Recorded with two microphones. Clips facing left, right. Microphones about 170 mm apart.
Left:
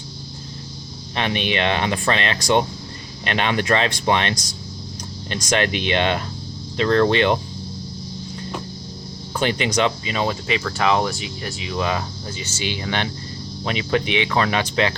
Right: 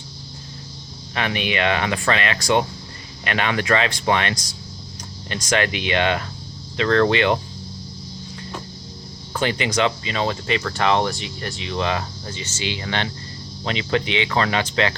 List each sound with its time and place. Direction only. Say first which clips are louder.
1.1 s speech: left 1 dB; 25° left (ahead or behind)
9.3 s speech: left 1 dB; 20° left (ahead or behind)